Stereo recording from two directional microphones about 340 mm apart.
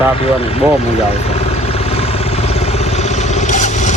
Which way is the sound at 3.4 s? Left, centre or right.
Left.